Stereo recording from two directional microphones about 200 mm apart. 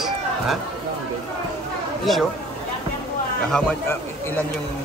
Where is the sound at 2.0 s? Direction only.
Centre (ahead or behind).